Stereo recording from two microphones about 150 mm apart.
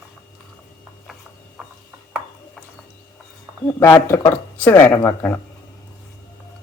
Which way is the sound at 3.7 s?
15° left (ahead or behind).